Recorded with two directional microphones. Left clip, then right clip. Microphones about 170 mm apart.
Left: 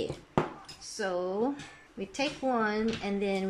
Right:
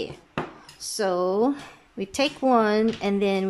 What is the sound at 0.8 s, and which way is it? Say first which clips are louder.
Speech: right 8 dB; 25° right (ahead or behind).